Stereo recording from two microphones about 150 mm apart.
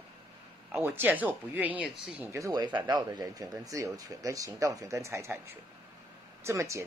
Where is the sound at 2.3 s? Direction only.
25° right (ahead or behind).